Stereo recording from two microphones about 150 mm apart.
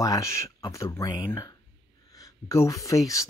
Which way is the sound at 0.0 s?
20° left (ahead or behind).